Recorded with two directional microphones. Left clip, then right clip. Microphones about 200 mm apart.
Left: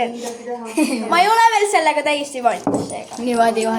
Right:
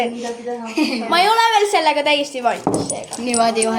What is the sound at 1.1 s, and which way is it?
Speech, 25° right (ahead or behind).